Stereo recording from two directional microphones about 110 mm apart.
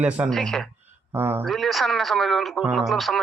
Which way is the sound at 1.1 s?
20° right (ahead or behind).